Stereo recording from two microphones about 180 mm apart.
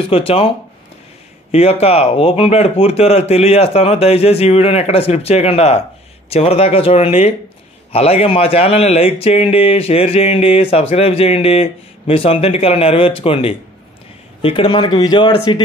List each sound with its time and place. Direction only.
0.0 s speech: 30° left (ahead or behind)
1.5 s speech: 35° left (ahead or behind)